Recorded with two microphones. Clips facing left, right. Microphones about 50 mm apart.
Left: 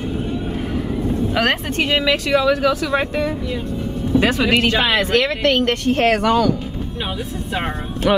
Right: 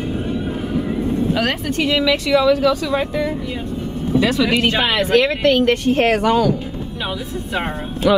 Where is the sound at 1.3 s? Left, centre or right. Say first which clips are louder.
Left 1 dB; left.